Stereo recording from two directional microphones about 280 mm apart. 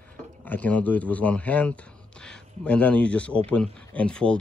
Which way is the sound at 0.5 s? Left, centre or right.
Centre.